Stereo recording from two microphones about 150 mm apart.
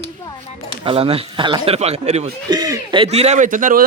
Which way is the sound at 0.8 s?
40° right (ahead or behind).